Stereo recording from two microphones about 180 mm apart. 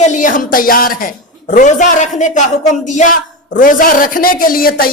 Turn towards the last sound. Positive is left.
turn(degrees=55)  # may be behind; listen again after turning